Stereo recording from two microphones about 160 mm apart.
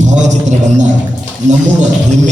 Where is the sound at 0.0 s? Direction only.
50° right (ahead or behind).